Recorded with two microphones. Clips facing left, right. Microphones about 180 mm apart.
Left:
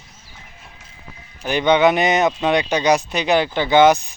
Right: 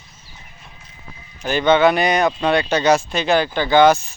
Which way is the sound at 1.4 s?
15° left (ahead or behind).